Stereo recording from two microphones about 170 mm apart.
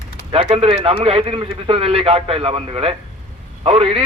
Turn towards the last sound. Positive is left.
turn(degrees=-35)  # may be behind; listen again after turning